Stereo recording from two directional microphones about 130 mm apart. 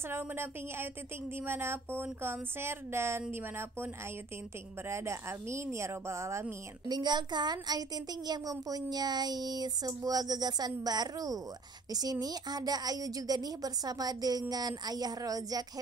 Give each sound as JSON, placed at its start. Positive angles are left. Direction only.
{"t": 0.1, "sound": "a woman's voice", "side_deg": -20}
{"t": 6.9, "sound": "speech", "side_deg": -35}